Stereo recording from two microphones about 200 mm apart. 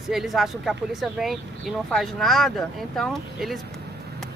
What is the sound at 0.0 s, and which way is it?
Speech, centre (ahead or behind).